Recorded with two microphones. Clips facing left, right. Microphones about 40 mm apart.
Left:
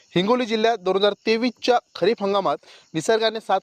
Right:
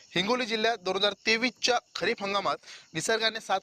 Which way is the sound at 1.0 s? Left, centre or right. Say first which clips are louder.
Left 4 dB; centre.